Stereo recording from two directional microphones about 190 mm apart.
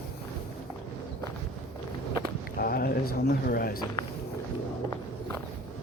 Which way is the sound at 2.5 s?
50° left (ahead or behind).